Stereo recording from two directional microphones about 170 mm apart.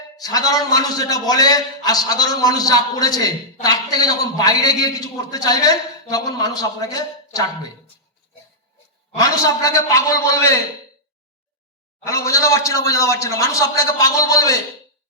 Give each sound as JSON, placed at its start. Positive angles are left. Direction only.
{"t": 0.2, "sound": "a man's voice", "side_deg": 20}
{"t": 9.2, "sound": "a man's voice", "side_deg": 20}
{"t": 12.0, "sound": "a man's voice", "side_deg": 15}